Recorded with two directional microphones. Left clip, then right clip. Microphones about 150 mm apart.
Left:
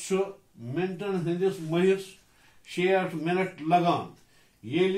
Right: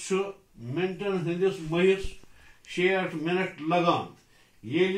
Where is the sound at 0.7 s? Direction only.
10° left (ahead or behind).